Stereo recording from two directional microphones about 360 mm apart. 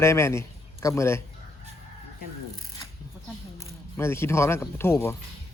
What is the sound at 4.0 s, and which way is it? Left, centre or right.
Speech, centre.